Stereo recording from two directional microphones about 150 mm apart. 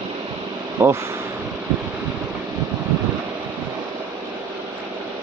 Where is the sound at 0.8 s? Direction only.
15° right (ahead or behind).